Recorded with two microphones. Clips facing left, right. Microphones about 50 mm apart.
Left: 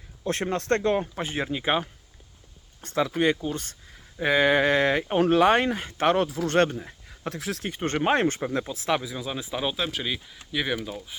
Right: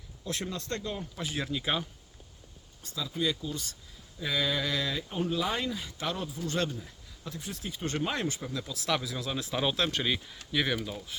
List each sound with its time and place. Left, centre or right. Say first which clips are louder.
0.3 s speech: left 10 dB; left
1.1 s speech: left 5 dB; left
2.8 s speech: left 9 dB; left
6.2 s speech: left 8 dB; left
6.6 s a sound: left 12 dB; left
7.3 s speech: left 7 dB; left
7.7 s speech: left 9 dB; left
8.7 s speech: left 2 dB; left
9.0 s speech: left 2 dB; centre